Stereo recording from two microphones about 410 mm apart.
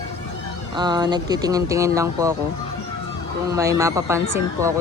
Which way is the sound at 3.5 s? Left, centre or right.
Centre.